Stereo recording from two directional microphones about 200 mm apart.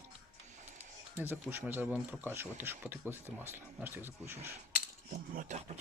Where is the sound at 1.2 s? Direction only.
10° right (ahead or behind).